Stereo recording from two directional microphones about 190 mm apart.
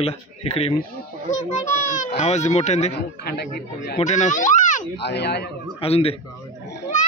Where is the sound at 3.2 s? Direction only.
55° left (ahead or behind).